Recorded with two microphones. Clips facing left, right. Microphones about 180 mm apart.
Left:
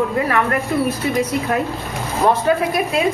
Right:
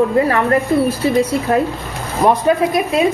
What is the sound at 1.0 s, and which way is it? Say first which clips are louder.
Speech: right 4 dB; 30° right (ahead or behind).